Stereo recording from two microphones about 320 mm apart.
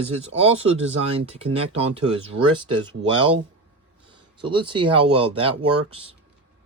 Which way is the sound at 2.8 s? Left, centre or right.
Centre.